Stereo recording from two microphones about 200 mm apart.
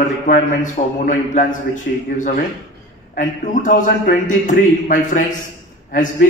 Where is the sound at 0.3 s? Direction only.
40° left (ahead or behind).